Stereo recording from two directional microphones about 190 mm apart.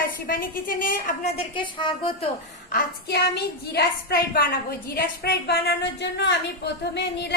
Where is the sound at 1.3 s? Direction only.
25° left (ahead or behind).